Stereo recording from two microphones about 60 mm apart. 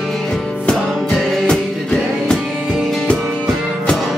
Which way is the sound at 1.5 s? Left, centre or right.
Centre.